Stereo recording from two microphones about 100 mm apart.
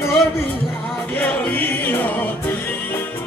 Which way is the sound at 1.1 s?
15° left (ahead or behind).